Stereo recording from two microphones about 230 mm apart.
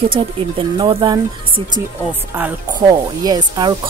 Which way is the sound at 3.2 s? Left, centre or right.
Centre.